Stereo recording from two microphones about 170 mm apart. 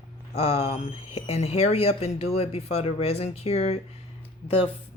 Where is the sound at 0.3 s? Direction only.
35° left (ahead or behind).